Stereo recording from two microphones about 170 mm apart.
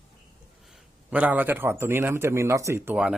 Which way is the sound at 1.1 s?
10° right (ahead or behind).